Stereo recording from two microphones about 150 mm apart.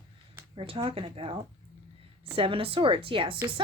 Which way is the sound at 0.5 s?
35° right (ahead or behind).